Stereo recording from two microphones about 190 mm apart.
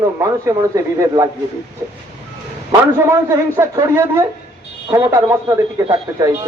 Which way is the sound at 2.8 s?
15° right (ahead or behind).